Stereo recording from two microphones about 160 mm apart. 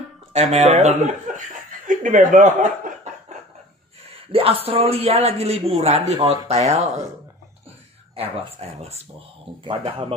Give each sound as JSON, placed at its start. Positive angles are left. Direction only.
{"t": 0.3, "sound": "speech", "side_deg": -45}
{"t": 4.3, "sound": "a man's voice", "side_deg": -35}
{"t": 8.2, "sound": "a man's voice", "side_deg": -40}